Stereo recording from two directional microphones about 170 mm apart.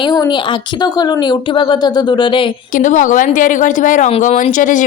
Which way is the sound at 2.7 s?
50° left (ahead or behind).